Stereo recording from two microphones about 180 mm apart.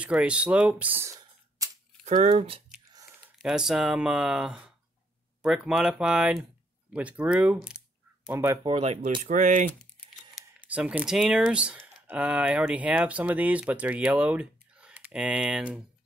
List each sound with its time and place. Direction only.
0.0 s speech: 5° right (ahead or behind)
1.6 s camera: 20° right (ahead or behind)
2.0 s speech: 40° right (ahead or behind)
3.3 s speech: 5° right (ahead or behind)
8.6 s speech: 30° right (ahead or behind)
10.3 s speech: 5° right (ahead or behind)